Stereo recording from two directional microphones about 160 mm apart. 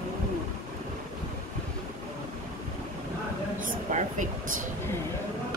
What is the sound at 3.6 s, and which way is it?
Speech, 55° right (ahead or behind).